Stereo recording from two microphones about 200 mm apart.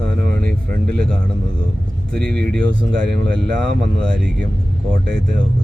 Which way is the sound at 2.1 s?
5° left (ahead or behind).